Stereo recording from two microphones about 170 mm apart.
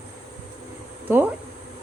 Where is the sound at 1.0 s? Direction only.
10° right (ahead or behind).